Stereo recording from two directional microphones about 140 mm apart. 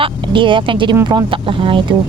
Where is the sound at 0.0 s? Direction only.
35° right (ahead or behind).